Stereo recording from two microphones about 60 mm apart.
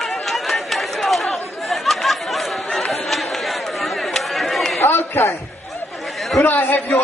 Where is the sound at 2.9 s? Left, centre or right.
Centre.